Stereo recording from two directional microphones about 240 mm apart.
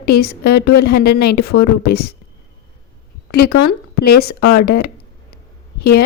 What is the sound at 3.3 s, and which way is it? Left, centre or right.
A woman's voice, left.